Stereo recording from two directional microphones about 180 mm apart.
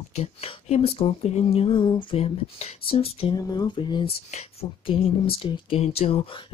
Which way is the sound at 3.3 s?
20° left (ahead or behind).